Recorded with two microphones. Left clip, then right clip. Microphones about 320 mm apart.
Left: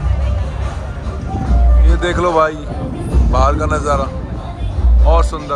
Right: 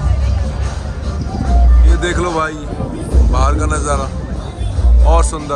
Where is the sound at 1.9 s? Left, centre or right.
Centre.